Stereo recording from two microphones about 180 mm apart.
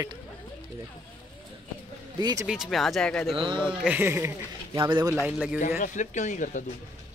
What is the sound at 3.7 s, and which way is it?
Speech, 5° right (ahead or behind).